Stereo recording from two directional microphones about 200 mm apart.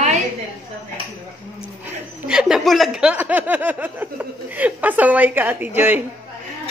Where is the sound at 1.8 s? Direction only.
5° right (ahead or behind).